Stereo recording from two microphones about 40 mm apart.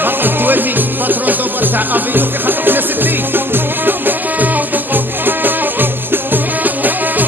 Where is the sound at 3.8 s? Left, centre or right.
Right.